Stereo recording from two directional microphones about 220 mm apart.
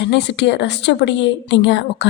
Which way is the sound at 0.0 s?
50° left (ahead or behind).